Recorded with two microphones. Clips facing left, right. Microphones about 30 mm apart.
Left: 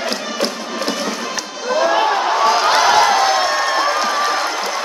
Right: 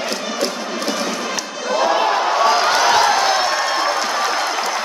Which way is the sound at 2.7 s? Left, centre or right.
Centre.